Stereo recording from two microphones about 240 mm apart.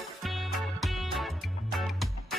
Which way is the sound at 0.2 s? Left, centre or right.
Centre.